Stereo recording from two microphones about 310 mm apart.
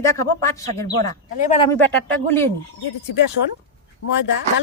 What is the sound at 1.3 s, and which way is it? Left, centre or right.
Speech, left.